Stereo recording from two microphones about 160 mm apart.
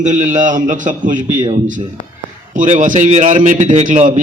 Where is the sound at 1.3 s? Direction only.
25° right (ahead or behind).